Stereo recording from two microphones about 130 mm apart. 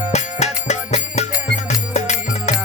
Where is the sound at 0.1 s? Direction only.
60° left (ahead or behind).